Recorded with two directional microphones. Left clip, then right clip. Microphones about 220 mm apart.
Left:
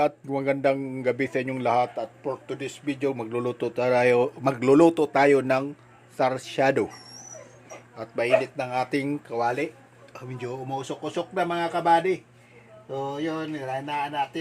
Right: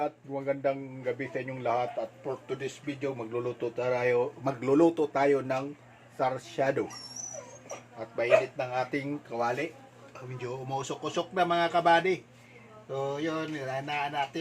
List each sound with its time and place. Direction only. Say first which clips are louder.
0.0 s speech: left 8 dB; 45° left (ahead or behind)
7.9 s speech: left 2 dB; 50° left (ahead or behind); by 14.2 s 30° left (ahead or behind)